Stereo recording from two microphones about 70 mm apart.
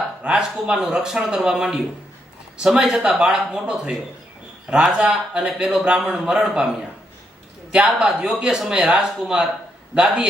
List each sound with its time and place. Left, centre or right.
0.2 s a man's voice: right
0.6 s speech: centre